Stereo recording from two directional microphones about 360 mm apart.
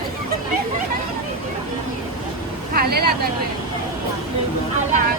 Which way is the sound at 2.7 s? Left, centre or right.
Right.